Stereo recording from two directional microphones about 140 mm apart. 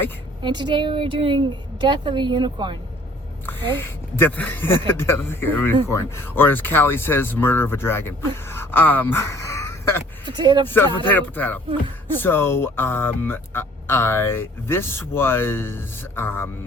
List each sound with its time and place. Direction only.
0.4 s a woman's voice: 35° right (ahead or behind)
3.4 s speech: 15° left (ahead or behind)
10.2 s a woman's voice: 30° right (ahead or behind)
10.7 s speech: 15° left (ahead or behind)